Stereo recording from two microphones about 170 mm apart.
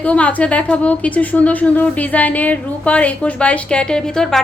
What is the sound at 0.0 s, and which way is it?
A woman's voice, 10° left (ahead or behind).